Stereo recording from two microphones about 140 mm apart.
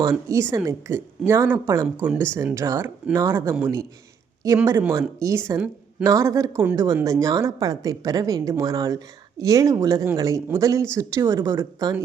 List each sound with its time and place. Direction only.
0.0 s a woman's voice: 20° right (ahead or behind)